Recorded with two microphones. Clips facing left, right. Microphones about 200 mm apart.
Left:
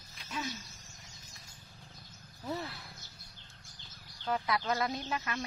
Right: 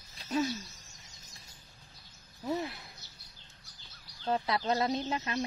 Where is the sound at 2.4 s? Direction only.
15° right (ahead or behind).